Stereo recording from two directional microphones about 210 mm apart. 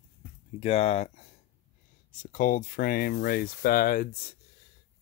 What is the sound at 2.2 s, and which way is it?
Speech, 40° left (ahead or behind).